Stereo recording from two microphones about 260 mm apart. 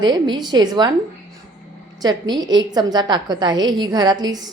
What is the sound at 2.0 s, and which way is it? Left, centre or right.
A woman's voice, centre.